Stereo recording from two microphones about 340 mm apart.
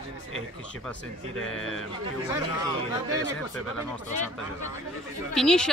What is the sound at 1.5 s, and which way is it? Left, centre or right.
Speech, left.